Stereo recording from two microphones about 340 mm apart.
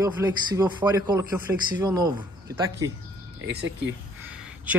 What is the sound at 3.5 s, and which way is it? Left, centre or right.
Speech, right.